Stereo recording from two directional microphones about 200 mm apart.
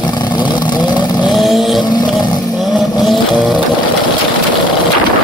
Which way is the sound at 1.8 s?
20° left (ahead or behind).